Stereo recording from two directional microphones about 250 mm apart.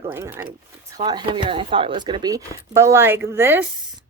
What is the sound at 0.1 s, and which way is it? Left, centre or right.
A woman's voice, centre.